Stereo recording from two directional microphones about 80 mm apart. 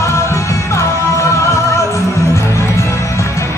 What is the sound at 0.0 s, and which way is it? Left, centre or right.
Music, left.